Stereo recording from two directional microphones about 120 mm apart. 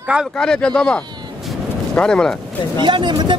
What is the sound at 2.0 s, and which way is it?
Speech, 5° left (ahead or behind).